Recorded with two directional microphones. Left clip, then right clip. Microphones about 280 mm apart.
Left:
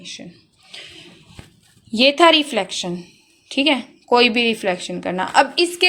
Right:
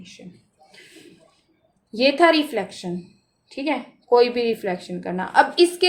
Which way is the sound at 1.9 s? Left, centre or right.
Left.